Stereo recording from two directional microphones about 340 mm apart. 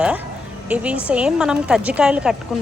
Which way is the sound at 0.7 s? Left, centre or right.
Centre.